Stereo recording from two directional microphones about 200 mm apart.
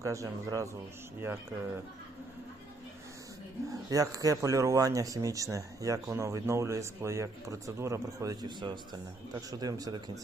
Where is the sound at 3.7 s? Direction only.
15° right (ahead or behind).